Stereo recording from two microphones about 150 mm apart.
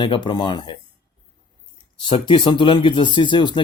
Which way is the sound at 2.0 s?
35° left (ahead or behind).